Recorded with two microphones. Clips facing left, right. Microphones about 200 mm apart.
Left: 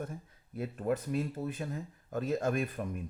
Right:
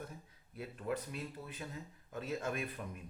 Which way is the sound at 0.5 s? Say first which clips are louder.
Left 7 dB; 45° left (ahead or behind).